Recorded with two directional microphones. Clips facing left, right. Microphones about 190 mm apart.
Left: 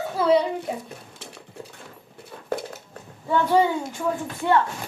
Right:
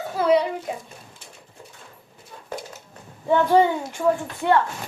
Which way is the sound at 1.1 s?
75° left (ahead or behind).